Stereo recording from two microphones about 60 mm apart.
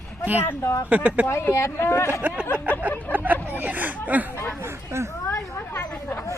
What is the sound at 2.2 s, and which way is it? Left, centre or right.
Speech, right.